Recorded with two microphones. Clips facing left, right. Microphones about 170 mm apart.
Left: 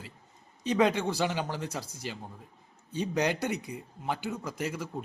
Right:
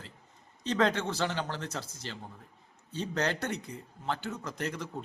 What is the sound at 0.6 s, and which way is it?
A man's voice, 10° left (ahead or behind).